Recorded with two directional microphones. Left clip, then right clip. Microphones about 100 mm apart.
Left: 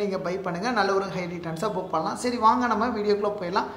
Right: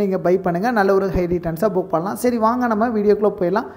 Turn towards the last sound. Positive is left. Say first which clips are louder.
# right 7 dB
turn(degrees=-70)  # may be behind; listen again after turning